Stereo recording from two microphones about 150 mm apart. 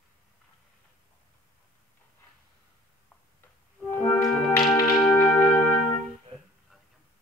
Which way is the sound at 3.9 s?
15° left (ahead or behind).